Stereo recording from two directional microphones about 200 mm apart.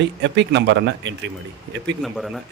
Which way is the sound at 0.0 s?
60° right (ahead or behind).